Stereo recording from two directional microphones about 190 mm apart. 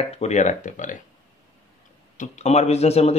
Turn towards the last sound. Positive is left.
turn(degrees=35)  # may be behind; listen again after turning